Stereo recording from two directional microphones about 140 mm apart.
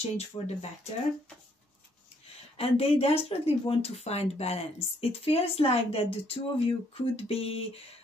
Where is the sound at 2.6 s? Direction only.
45° left (ahead or behind).